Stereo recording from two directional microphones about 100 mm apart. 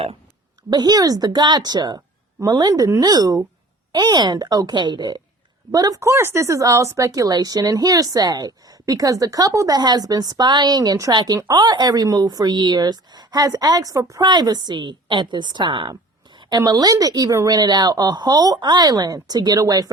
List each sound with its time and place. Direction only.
0.7 s speech: 40° right (ahead or behind)
5.7 s speech: 40° right (ahead or behind)